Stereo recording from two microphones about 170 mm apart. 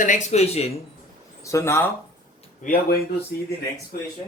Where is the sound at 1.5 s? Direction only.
15° left (ahead or behind).